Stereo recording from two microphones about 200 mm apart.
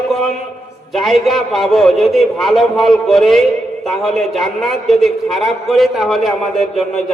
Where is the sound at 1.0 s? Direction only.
Centre (ahead or behind).